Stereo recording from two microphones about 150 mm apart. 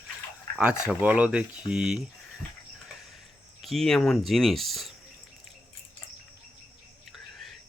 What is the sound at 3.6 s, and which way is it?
Speech, centre (ahead or behind).